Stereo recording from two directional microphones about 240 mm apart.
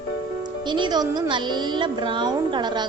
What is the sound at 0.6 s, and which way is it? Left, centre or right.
Speech, centre.